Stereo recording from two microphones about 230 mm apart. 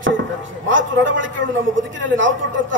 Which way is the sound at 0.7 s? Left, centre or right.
Right.